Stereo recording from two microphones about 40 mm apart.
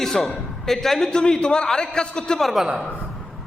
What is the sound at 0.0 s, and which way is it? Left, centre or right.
A man's voice, centre.